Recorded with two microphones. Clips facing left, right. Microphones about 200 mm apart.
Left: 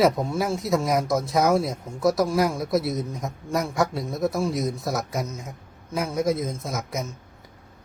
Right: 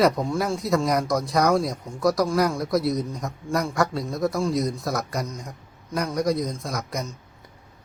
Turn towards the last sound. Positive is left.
turn(degrees=0)  # may be behind; listen again after turning